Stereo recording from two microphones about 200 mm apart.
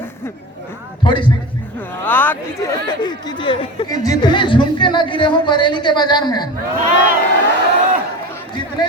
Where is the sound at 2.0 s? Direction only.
10° left (ahead or behind).